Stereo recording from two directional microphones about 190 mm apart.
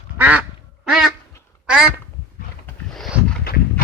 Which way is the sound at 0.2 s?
10° right (ahead or behind).